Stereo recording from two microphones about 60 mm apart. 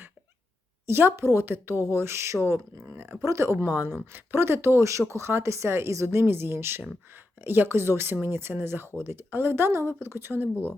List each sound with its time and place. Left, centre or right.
0.9 s speech: right
3.7 s speech: right
3.9 s speech: right